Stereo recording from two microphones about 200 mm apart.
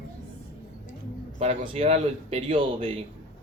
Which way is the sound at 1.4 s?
30° right (ahead or behind).